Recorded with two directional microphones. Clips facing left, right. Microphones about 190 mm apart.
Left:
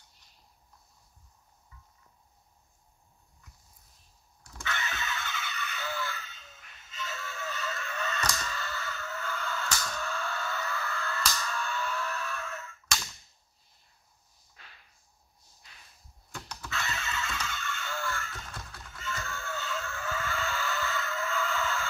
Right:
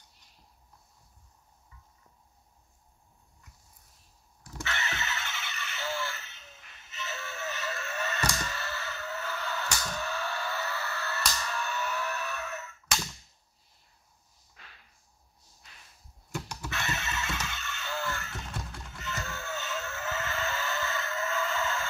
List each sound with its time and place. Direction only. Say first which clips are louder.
4.7 s music: even; 25° right (ahead or behind)
8.4 s a sound: right 1 dB; 25° right (ahead or behind)
16.3 s music: right 3 dB; 15° right (ahead or behind)